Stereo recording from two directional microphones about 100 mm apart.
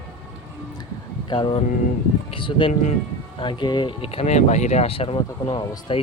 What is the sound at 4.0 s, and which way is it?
Speech, 80° left.